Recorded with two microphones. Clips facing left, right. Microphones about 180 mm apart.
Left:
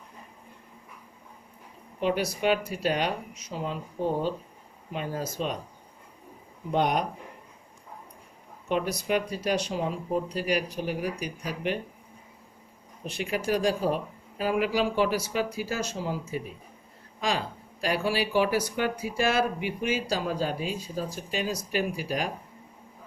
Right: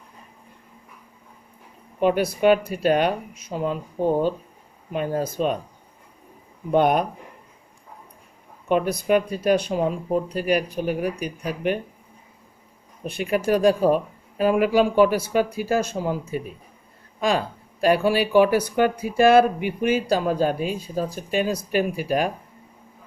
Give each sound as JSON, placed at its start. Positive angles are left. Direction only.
{"t": 2.0, "sound": "speech", "side_deg": -55}
{"t": 6.7, "sound": "speech", "side_deg": -55}
{"t": 8.7, "sound": "speech", "side_deg": -55}
{"t": 13.1, "sound": "speech", "side_deg": -55}